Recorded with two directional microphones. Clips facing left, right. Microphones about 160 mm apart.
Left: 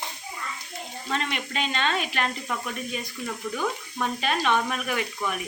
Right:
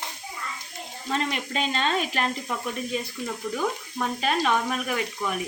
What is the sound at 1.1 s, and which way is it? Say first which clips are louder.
Speech: right 2 dB; 35° right (ahead or behind).